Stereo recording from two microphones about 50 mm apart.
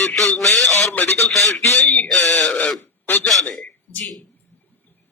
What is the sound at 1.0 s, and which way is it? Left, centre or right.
Speech, left.